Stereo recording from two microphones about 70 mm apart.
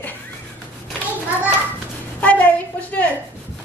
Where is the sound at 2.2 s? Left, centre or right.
Left.